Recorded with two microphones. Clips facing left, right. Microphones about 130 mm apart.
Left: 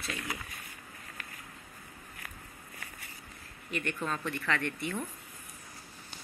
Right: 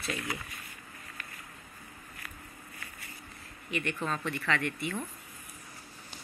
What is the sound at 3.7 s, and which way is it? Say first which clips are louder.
Speech: right 1 dB; 40° left (ahead or behind).